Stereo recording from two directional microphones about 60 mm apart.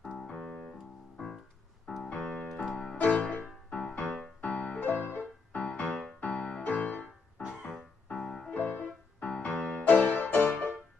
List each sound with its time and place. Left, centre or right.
0.0 s piano: centre
1.1 s music: centre
2.0 s keyboard: centre
2.6 s music: centre
5.0 s music: left
5.6 s music: centre
7.6 s keyboard: centre
8.5 s music: left